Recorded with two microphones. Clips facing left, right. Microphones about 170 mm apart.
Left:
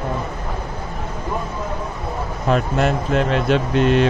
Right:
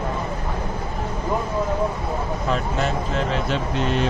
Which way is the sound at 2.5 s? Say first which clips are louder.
Left 7 dB; 60° left (ahead or behind).